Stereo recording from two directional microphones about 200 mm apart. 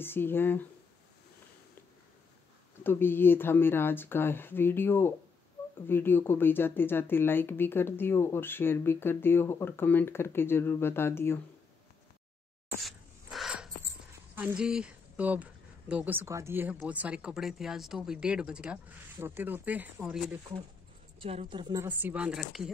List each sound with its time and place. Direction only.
0.0 s speech: 10° left (ahead or behind)
2.8 s speech: 10° left (ahead or behind)
12.8 s dog: centre (ahead or behind)
14.3 s speech: 5° right (ahead or behind)
21.2 s a woman's voice: 30° right (ahead or behind)
21.8 s speech: 10° right (ahead or behind)